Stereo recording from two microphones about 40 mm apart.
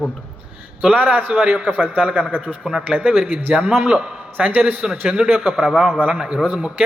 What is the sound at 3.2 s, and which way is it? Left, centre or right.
A man's voice, right.